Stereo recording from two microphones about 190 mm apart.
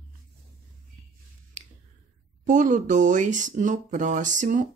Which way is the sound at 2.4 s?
40° right (ahead or behind).